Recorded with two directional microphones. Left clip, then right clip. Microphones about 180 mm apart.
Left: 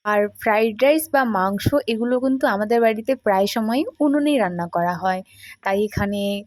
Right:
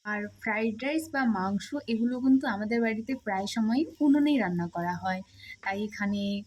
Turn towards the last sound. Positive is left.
turn(degrees=40)  # may be behind; listen again after turning